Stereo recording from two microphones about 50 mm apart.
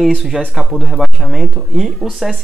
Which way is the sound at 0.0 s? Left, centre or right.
Centre.